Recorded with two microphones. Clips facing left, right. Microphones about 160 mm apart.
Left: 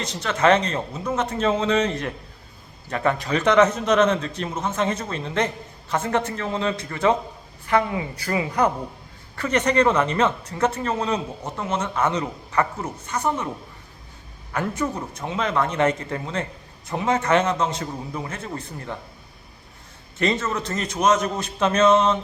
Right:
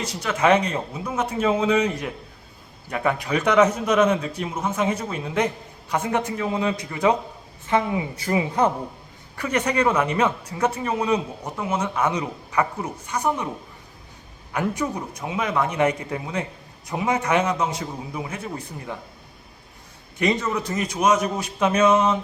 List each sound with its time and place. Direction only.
0.0 s a woman's voice: 10° right (ahead or behind)
9.3 s speech: 10° right (ahead or behind)
14.5 s speech: 15° right (ahead or behind)
20.1 s speech: 15° right (ahead or behind)